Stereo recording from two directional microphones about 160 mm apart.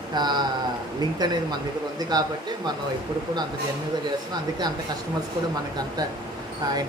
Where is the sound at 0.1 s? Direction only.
25° right (ahead or behind).